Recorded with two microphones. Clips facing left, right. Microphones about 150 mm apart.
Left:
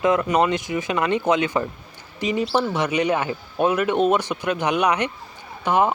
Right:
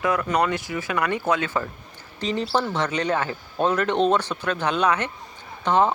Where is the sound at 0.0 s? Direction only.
20° left (ahead or behind).